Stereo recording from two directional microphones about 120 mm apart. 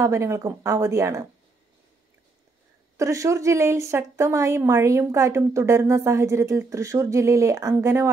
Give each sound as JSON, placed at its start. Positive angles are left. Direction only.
{"t": 0.0, "sound": "a woman's voice", "side_deg": -25}
{"t": 3.0, "sound": "a woman's voice", "side_deg": -25}